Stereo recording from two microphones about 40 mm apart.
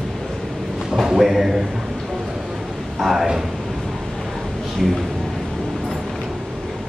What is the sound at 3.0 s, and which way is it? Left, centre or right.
Speech, centre.